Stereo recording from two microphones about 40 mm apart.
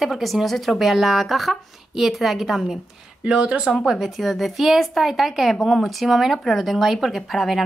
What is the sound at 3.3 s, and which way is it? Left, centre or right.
Speech, right.